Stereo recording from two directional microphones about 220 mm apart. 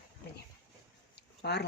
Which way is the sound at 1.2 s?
50° left (ahead or behind).